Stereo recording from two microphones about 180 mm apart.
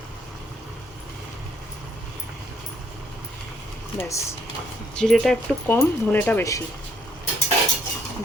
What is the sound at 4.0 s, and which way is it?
Speech, 15° left (ahead or behind).